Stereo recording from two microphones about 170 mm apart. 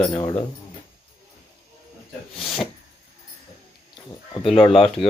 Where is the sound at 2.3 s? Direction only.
Centre (ahead or behind).